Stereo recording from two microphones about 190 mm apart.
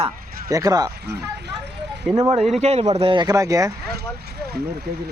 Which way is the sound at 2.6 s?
35° right (ahead or behind).